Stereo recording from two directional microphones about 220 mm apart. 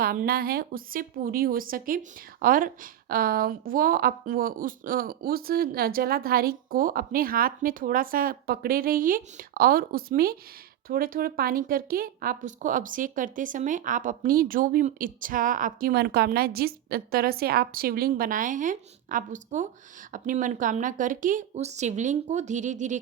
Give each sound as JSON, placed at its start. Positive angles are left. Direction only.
{"t": 0.0, "sound": "a woman's voice", "side_deg": -40}